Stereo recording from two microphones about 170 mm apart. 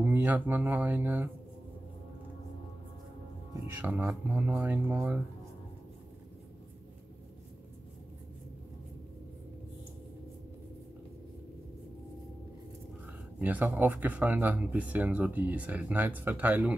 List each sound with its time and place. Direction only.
0.0 s speech: 10° right (ahead or behind)
3.7 s speech: 10° right (ahead or behind)
13.4 s speech: 10° right (ahead or behind)